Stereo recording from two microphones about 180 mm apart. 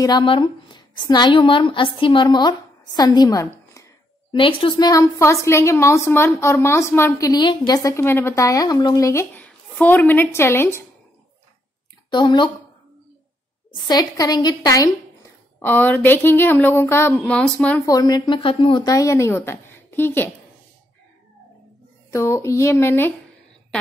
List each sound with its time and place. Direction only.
0.0 s a woman's voice: 25° left (ahead or behind)
4.4 s a woman's voice: 30° left (ahead or behind); by 10.8 s 15° left (ahead or behind)
12.1 s speech: 25° left (ahead or behind)
13.8 s speech: 20° left (ahead or behind)
15.6 s a woman's voice: 10° left (ahead or behind)
17.8 s speech: 20° left (ahead or behind)
22.1 s a woman's voice: 15° left (ahead or behind)